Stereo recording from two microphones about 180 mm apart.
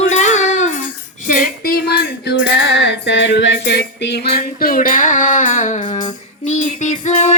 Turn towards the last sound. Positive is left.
turn(degrees=40)  # may be behind; listen again after turning